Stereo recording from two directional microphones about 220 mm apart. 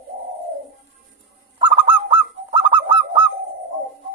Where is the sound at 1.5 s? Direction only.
20° right (ahead or behind).